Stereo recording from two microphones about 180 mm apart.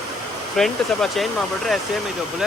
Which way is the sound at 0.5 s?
Centre (ahead or behind).